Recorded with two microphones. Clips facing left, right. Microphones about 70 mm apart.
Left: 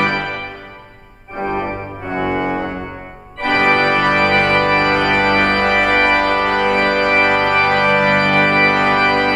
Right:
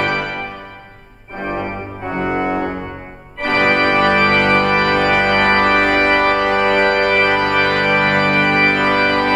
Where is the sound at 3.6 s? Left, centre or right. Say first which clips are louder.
Even; left.